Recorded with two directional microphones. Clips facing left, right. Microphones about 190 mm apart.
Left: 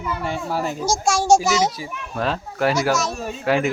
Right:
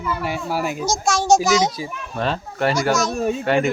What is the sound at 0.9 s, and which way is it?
A child's voice, 10° left (ahead or behind).